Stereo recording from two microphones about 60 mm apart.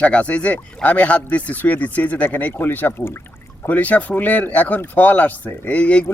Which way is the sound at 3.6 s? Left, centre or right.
Left.